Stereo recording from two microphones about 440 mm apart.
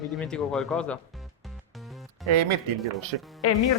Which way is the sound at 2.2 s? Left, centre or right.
Right.